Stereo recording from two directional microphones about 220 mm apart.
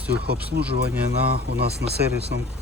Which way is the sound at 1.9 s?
50° right (ahead or behind).